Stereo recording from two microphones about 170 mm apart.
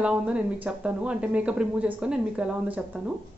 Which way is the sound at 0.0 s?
5° right (ahead or behind).